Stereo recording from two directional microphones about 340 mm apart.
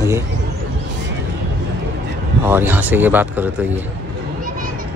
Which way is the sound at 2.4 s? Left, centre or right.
Centre.